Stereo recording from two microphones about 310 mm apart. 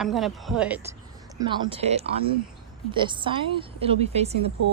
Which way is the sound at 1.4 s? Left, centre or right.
Centre.